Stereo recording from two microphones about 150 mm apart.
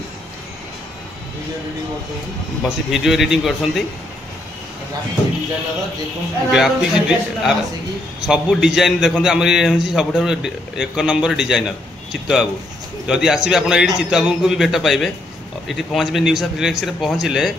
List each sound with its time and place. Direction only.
2.9 s a man's voice: centre (ahead or behind)
6.5 s a man's voice: 5° right (ahead or behind)